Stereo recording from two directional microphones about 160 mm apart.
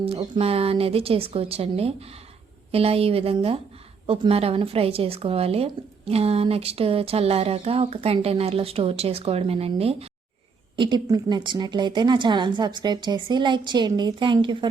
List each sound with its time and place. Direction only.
0.0 s a woman's voice: 35° right (ahead or behind)
10.8 s a woman's voice: 30° right (ahead or behind)